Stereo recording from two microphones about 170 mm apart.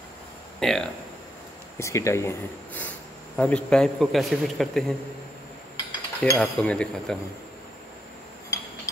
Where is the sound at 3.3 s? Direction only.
5° left (ahead or behind).